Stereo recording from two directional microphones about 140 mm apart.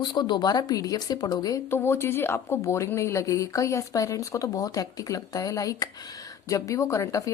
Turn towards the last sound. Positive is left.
turn(degrees=20)  # may be behind; listen again after turning